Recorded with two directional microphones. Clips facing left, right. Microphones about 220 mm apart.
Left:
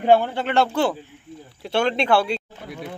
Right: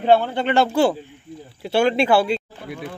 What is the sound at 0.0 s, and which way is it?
Speech, 10° left (ahead or behind).